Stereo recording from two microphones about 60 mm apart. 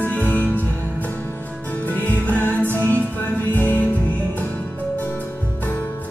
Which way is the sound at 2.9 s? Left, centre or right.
Left.